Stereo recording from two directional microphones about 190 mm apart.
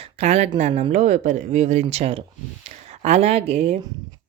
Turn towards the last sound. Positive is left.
turn(degrees=-35)  # may be behind; listen again after turning